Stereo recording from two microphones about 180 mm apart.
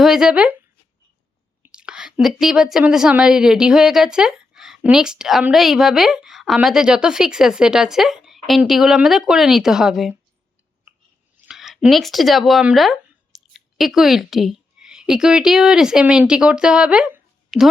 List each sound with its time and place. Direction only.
0.0 s speech: 5° right (ahead or behind)
1.6 s speech: 5° right (ahead or behind)
11.4 s speech: centre (ahead or behind)